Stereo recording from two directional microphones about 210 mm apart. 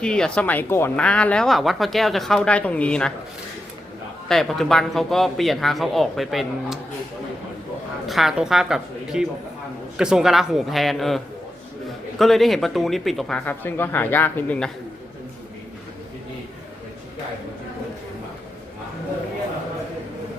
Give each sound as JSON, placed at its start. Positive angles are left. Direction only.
{"t": 0.0, "sound": "a woman's voice", "side_deg": 5}
{"t": 4.3, "sound": "a woman's voice", "side_deg": 0}
{"t": 8.0, "sound": "a woman's voice", "side_deg": 0}
{"t": 12.2, "sound": "a woman's voice", "side_deg": 0}